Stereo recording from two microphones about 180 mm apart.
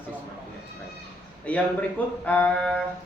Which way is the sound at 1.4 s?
10° left (ahead or behind).